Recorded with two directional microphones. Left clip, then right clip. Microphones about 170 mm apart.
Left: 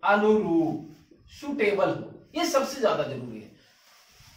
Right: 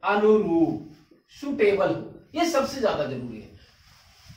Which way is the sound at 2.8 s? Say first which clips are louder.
Left 1 dB; 5° right (ahead or behind).